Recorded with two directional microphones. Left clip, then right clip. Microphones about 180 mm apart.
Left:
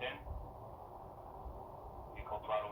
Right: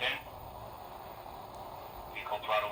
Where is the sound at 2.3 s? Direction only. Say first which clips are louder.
Right 6 dB; 40° right (ahead or behind).